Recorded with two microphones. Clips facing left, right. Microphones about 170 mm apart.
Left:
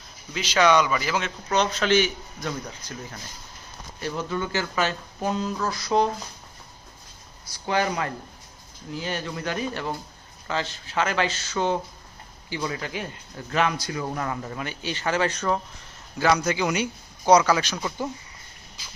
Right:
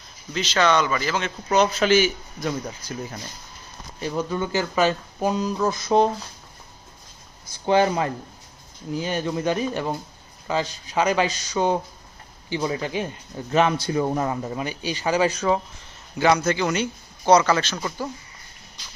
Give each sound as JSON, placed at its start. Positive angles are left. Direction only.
{"t": 0.3, "sound": "speech", "side_deg": 10}
{"t": 1.5, "sound": "a man's voice", "side_deg": -10}
{"t": 4.0, "sound": "a man's voice", "side_deg": -15}
{"t": 7.6, "sound": "a man's voice", "side_deg": -25}
{"t": 12.5, "sound": "a man's voice", "side_deg": -25}
{"t": 16.4, "sound": "speech", "side_deg": 10}